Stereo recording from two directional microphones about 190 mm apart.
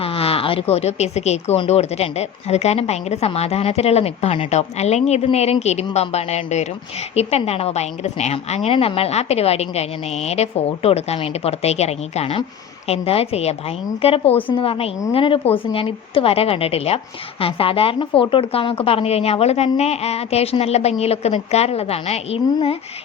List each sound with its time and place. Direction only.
0.0 s speech: 30° left (ahead or behind)